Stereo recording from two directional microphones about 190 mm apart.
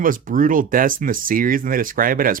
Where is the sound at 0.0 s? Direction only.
45° right (ahead or behind).